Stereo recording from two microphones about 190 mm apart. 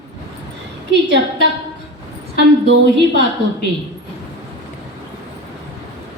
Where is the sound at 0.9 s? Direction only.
70° right (ahead or behind).